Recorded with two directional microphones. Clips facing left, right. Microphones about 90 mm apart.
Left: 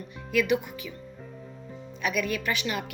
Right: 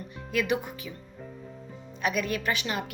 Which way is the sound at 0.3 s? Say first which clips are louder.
Left 3 dB; 30° right (ahead or behind).